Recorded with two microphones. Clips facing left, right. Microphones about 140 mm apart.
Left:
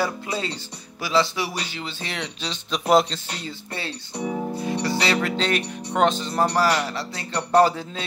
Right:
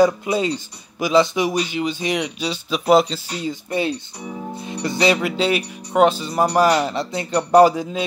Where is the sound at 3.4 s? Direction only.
15° right (ahead or behind).